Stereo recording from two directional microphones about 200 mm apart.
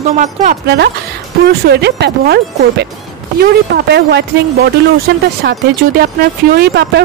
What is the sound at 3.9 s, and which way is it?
Speech, 55° right (ahead or behind).